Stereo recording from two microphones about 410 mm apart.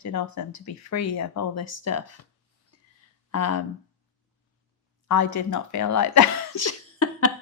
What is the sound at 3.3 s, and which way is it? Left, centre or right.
Speech, left.